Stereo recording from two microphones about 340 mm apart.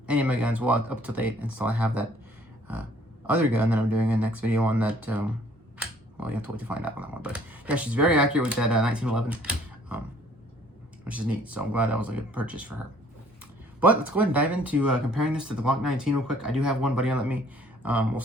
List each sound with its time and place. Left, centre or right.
0.1 s speech: centre
3.2 s speech: centre
11.0 s speech: centre
13.8 s speech: centre